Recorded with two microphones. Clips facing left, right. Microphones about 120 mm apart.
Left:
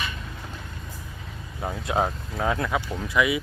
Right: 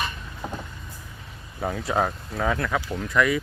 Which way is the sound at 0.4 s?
50° right (ahead or behind).